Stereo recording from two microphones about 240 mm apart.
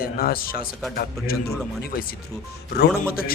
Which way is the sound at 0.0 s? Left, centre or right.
Left.